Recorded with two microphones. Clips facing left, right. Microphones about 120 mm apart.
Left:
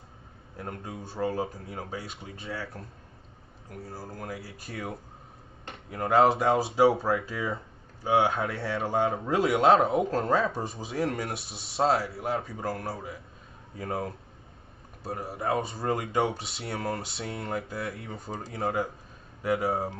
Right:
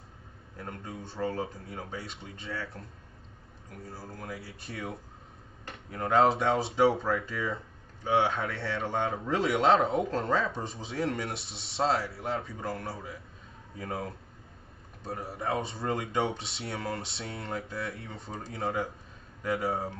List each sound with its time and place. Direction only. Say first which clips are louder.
1.2 s speech: left 3 dB; 5° left (ahead or behind)
6.7 s speech: left 2 dB; 25° left (ahead or behind)
7.0 s speech: left 2 dB; 10° left (ahead or behind)
15.4 s speech: left 3 dB; centre (ahead or behind)